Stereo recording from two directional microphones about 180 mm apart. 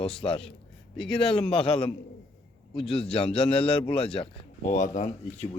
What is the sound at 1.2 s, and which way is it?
A man's voice, 30° left (ahead or behind).